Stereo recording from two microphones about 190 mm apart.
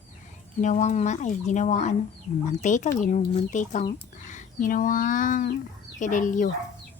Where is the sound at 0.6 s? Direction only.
40° left (ahead or behind).